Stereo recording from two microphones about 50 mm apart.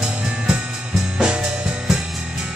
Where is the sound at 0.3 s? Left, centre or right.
Centre.